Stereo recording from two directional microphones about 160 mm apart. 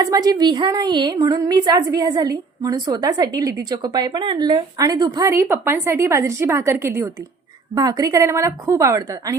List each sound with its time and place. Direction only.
0.0 s a woman's voice: 25° right (ahead or behind)